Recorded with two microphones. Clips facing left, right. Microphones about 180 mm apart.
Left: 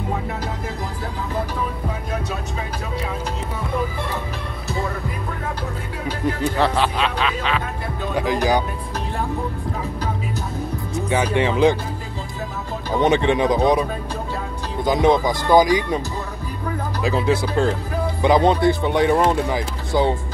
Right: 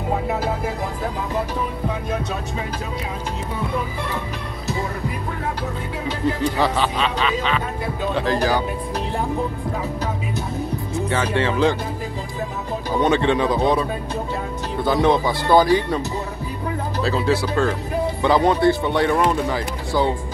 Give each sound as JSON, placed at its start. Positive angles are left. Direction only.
{"t": 6.4, "sound": "speech", "side_deg": 0}
{"t": 8.1, "sound": "speech", "side_deg": 10}
{"t": 11.1, "sound": "speech", "side_deg": 15}
{"t": 13.0, "sound": "speech", "side_deg": 15}
{"t": 17.0, "sound": "speech", "side_deg": 20}